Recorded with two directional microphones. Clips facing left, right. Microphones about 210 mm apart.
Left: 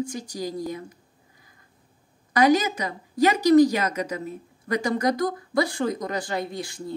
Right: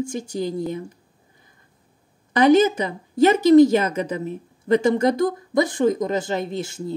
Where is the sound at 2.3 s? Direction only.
25° right (ahead or behind).